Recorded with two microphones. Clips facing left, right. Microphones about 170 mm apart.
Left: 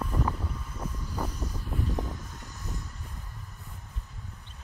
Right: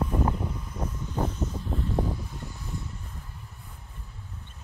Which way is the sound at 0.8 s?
10° right (ahead or behind).